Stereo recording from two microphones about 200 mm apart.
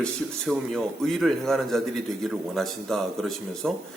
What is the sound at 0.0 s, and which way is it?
A man's voice, centre (ahead or behind).